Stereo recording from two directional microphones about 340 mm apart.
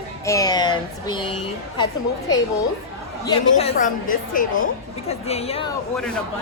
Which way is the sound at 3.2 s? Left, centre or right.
Centre.